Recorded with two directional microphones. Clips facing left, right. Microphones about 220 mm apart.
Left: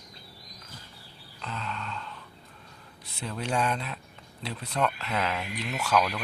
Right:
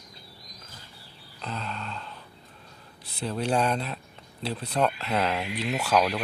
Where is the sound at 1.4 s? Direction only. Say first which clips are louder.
Right 2 dB; 35° right (ahead or behind).